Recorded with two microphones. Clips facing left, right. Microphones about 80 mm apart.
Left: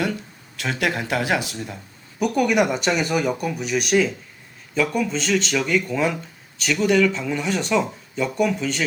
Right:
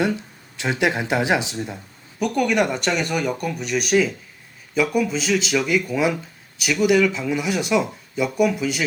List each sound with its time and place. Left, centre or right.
0.0 s speech: centre
2.1 s speech: centre